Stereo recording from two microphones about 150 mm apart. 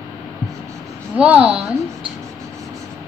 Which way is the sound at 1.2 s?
5° right (ahead or behind).